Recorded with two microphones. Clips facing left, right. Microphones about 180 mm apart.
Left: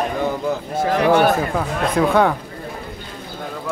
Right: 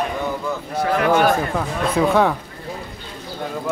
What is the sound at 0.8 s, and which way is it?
Speech, 15° left (ahead or behind).